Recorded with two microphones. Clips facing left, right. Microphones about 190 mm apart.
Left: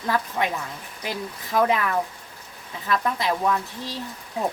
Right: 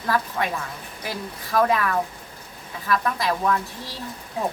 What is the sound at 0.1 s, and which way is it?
Speech, 20° left (ahead or behind).